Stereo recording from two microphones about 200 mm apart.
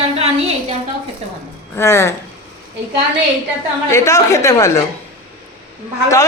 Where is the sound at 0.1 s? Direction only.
30° right (ahead or behind).